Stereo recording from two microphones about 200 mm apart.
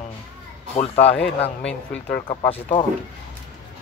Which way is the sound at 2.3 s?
25° left (ahead or behind).